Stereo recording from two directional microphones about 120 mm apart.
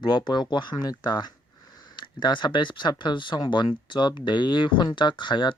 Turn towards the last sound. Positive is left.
turn(degrees=40)  # may be behind; listen again after turning